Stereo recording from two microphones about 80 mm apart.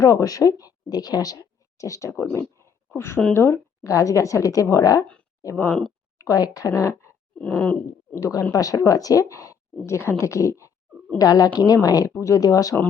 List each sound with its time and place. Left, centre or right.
0.0 s speech: left
2.6 s a sound: left
3.3 s a woman's voice: left
5.5 s speech: centre
6.1 s speech: left
7.3 s a sound: centre
8.1 s speech: left
9.8 s a woman's voice: left
11.2 s speech: left
12.1 s speech: left